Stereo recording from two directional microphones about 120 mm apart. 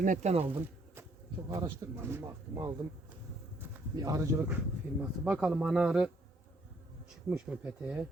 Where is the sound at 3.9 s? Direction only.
30° right (ahead or behind).